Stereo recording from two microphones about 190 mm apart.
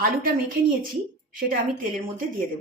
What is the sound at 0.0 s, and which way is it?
Speech, 45° right (ahead or behind).